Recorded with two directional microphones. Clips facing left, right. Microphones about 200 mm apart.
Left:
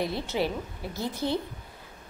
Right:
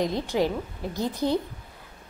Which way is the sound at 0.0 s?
15° right (ahead or behind).